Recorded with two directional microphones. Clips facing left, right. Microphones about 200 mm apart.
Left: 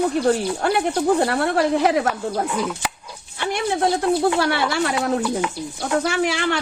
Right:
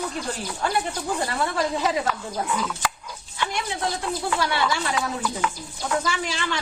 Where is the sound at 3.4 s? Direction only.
60° left (ahead or behind).